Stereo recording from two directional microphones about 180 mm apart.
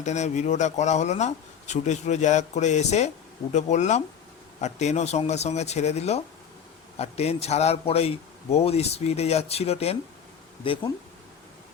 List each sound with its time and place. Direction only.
0.0 s speech: 40° left (ahead or behind)